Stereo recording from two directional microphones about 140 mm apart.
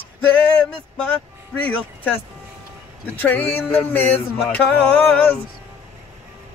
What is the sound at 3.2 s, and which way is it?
Speech, 10° left (ahead or behind).